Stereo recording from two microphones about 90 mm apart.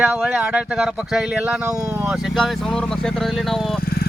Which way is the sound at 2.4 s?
5° left (ahead or behind).